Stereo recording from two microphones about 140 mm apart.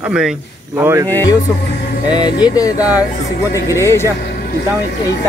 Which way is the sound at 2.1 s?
30° left (ahead or behind).